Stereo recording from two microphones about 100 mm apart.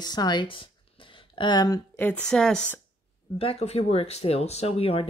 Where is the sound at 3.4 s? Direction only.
80° left.